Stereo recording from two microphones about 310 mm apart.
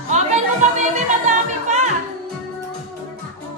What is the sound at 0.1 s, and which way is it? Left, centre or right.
Music, right.